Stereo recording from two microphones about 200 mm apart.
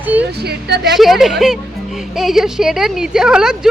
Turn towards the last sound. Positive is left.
turn(degrees=-5)  # may be behind; listen again after turning